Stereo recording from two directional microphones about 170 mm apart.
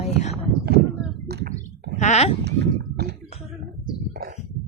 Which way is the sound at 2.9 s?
70° right (ahead or behind).